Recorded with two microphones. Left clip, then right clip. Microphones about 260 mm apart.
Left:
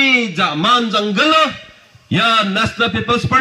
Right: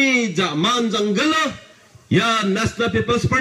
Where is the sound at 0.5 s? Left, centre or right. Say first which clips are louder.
Left 6 dB; centre.